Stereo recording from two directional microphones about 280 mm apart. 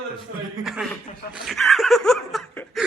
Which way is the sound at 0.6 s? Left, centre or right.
Centre.